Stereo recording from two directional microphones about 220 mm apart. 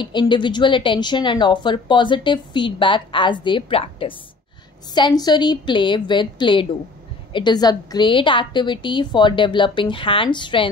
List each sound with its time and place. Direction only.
0.0 s a woman's voice: 20° left (ahead or behind)